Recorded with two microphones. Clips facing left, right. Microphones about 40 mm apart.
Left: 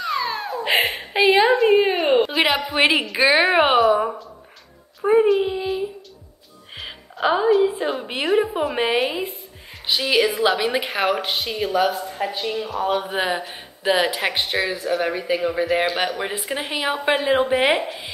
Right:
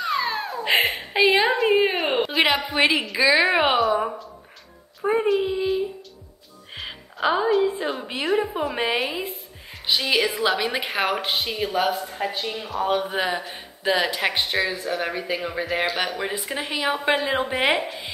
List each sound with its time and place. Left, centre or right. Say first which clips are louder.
0.1 s a sound: left 1 dB; centre
0.8 s a woman's voice: left 2 dB; centre
2.8 s a woman's voice: left 3 dB; centre
3.2 s a woman's voice: left 1 dB; left
3.5 s a woman's voice: left 4 dB; centre
3.8 s a woman's voice: left 4 dB; centre
16.2 s a woman's voice: left 2 dB; centre